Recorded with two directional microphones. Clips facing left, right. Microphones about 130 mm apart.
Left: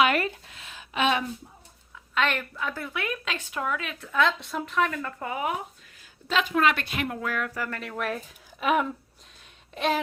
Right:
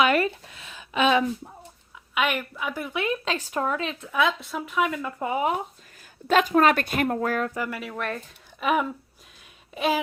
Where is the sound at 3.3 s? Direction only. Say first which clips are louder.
Right 4 dB; 40° right (ahead or behind).